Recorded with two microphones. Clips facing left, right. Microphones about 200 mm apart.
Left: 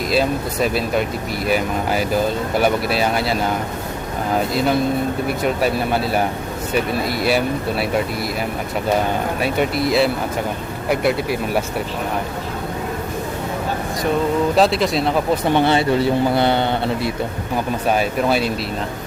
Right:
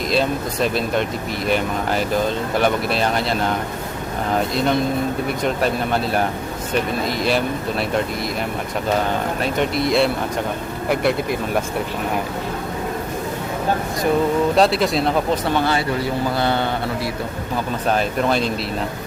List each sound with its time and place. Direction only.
0.1 s speech: 5° left (ahead or behind)
9.4 s speech: 5° left (ahead or behind)
14.5 s speech: centre (ahead or behind)
15.4 s speech: 20° left (ahead or behind)
17.8 s speech: 5° left (ahead or behind)